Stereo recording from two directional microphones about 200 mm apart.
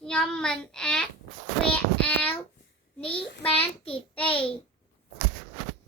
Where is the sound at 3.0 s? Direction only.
30° left (ahead or behind).